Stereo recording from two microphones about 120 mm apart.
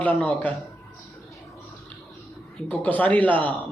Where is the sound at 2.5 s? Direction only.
15° left (ahead or behind).